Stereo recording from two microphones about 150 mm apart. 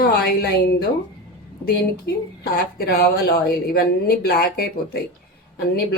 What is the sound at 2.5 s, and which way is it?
Speech, 90° left.